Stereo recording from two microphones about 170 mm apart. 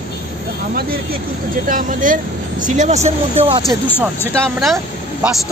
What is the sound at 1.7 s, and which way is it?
Speech, 50° right (ahead or behind).